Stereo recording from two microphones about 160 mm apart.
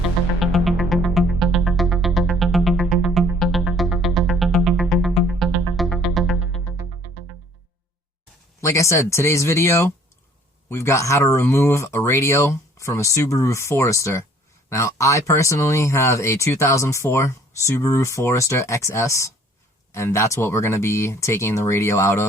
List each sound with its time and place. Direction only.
0.3 s music: centre (ahead or behind)
8.6 s speech: 20° left (ahead or behind)